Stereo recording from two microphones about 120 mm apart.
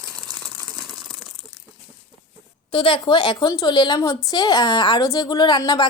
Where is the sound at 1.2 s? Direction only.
35° right (ahead or behind).